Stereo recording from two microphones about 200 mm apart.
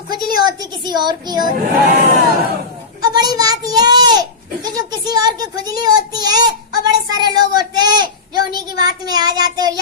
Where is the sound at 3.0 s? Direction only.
20° right (ahead or behind).